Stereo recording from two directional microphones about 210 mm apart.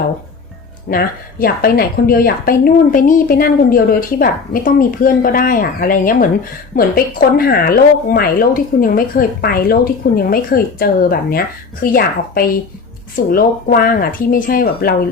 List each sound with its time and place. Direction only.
0.9 s a woman's voice: 45° left (ahead or behind)